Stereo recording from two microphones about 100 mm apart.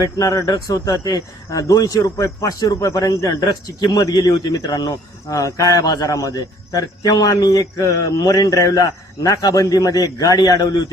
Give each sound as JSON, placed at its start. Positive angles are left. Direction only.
{"t": 0.2, "sound": "speech", "side_deg": 35}